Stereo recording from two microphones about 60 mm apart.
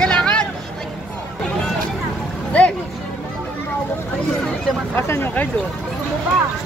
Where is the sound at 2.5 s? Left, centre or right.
Left.